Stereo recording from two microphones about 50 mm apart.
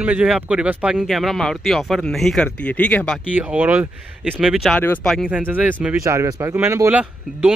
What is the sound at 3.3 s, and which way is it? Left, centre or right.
Speech, right.